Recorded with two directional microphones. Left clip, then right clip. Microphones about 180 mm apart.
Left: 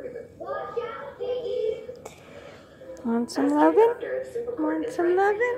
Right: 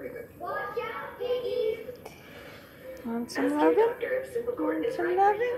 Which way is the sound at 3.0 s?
35° left (ahead or behind).